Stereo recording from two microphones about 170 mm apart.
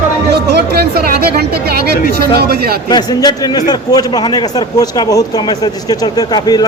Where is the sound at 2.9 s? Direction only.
25° left (ahead or behind).